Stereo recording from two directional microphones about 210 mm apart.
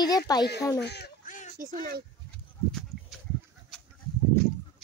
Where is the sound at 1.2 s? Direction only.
35° left (ahead or behind).